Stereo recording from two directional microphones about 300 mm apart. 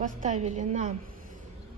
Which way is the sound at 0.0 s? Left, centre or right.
Right.